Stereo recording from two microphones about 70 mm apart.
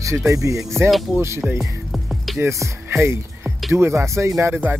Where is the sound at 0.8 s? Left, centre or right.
Centre.